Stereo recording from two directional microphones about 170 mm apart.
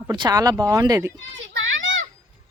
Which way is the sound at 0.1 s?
20° right (ahead or behind).